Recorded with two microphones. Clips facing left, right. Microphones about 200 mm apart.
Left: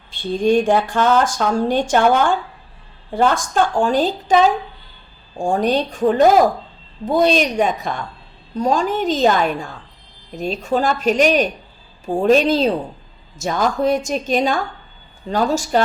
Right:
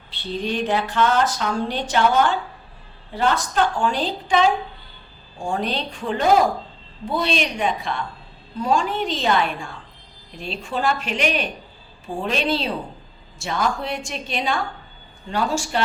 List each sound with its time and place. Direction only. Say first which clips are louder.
0.1 s speech: left 10 dB; 50° left (ahead or behind)